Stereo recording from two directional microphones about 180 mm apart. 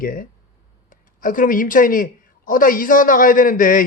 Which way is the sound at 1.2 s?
50° left (ahead or behind).